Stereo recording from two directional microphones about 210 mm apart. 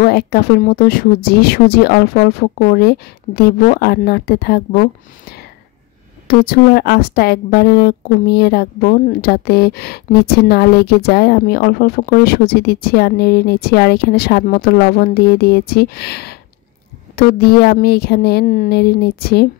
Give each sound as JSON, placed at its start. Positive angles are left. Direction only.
{"t": 0.0, "sound": "a woman's voice", "side_deg": 50}
{"t": 6.2, "sound": "a woman's voice", "side_deg": 45}